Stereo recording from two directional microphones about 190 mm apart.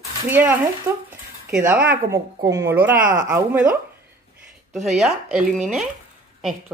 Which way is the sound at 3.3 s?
10° right (ahead or behind).